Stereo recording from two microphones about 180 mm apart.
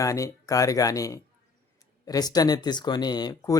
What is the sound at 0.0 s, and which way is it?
A man's voice, 15° left (ahead or behind).